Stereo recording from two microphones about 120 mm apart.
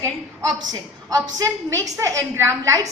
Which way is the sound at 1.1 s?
30° right (ahead or behind).